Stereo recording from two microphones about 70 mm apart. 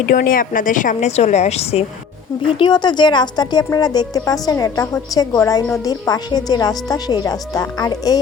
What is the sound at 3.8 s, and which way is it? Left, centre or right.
A woman's voice, left.